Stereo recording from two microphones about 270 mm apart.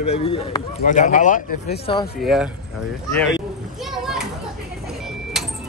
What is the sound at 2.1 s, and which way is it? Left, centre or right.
Speech, centre.